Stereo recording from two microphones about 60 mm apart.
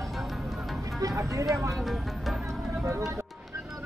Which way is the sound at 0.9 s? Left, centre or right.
Right.